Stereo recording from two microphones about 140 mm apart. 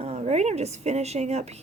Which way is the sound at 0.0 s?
50° right (ahead or behind).